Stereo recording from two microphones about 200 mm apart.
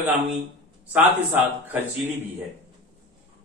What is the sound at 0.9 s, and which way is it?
A man's voice, 10° right (ahead or behind).